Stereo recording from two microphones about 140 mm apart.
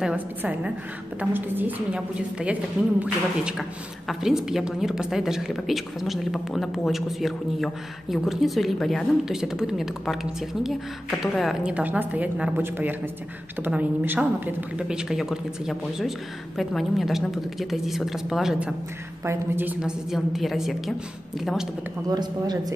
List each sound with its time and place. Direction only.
0.0 s a woman's voice: 10° right (ahead or behind)
19.2 s a woman's voice: 15° right (ahead or behind)
22.1 s a woman's voice: 30° right (ahead or behind)